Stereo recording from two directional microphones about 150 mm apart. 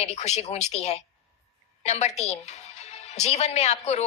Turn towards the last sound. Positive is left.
turn(degrees=45)  # may be behind; listen again after turning